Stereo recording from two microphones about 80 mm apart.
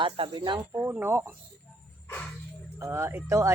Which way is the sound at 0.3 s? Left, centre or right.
Right.